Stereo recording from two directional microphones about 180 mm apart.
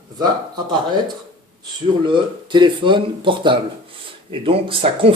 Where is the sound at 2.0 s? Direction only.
25° right (ahead or behind).